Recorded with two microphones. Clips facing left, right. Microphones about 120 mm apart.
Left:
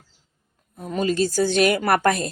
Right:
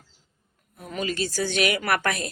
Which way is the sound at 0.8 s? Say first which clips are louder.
Left 7 dB; 35° left (ahead or behind).